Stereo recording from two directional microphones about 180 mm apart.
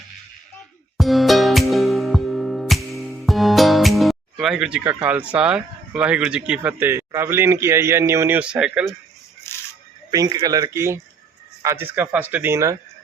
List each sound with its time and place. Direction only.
0.9 s music: centre (ahead or behind)
9.5 s a sound: 15° left (ahead or behind)
10.1 s speech: 20° right (ahead or behind)